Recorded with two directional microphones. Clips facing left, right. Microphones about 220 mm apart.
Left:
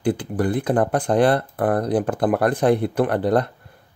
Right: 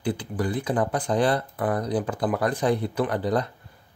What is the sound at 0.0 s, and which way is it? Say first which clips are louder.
Speech: left 6 dB; 50° left (ahead or behind).